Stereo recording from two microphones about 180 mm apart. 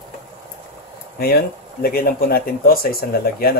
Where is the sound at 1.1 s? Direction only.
60° left (ahead or behind).